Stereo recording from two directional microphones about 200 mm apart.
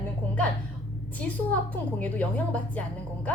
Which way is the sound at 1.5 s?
10° left (ahead or behind).